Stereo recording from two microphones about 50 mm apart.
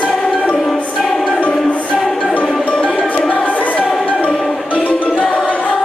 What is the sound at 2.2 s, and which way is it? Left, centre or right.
Music, left.